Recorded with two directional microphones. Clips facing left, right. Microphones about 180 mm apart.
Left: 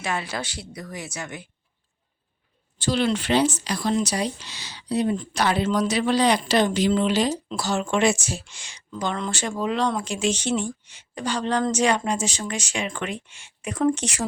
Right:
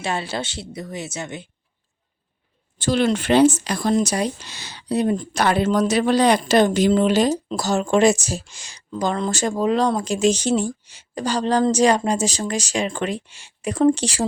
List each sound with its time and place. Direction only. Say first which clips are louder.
0.0 s a woman's voice: right 3 dB; 30° right (ahead or behind)
2.7 s speech: right 3 dB; 50° right (ahead or behind); by 14.3 s 30° right (ahead or behind)